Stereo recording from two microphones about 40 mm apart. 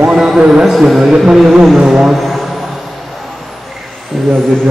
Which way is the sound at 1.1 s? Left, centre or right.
Centre.